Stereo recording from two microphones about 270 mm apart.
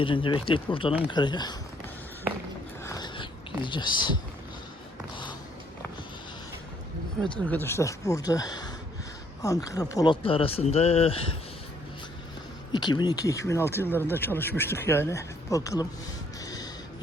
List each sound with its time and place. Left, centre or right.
0.0 s speech: centre
2.8 s a sound: centre
7.4 s speech: centre
12.7 s speech: centre
16.4 s music: centre